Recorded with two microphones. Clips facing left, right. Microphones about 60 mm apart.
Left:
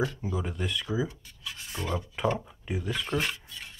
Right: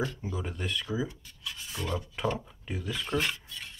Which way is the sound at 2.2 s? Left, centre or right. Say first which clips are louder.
Left 4 dB; centre.